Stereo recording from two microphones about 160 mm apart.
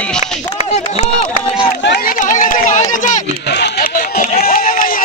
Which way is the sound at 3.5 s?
85° left.